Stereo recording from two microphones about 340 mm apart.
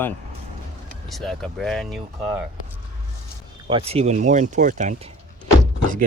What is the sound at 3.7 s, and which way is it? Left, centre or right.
Speech, centre.